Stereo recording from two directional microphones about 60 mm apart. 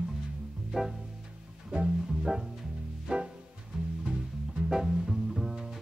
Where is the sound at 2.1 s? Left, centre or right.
Centre.